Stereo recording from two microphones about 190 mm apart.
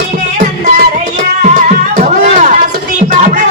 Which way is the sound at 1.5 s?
40° right (ahead or behind).